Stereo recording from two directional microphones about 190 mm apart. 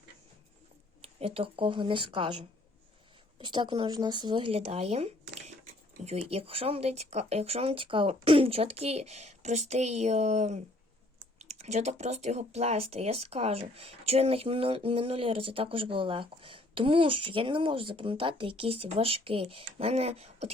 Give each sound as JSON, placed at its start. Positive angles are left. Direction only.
{"t": 1.0, "sound": "speech", "side_deg": -30}